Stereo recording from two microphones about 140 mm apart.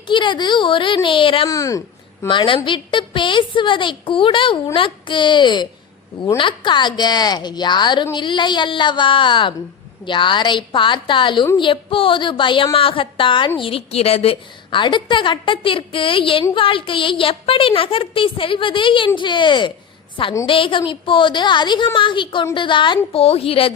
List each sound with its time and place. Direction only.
0.1 s a woman's voice: 35° left (ahead or behind)
1.5 s speech: 25° left (ahead or behind)
2.2 s a woman's voice: 35° left (ahead or behind)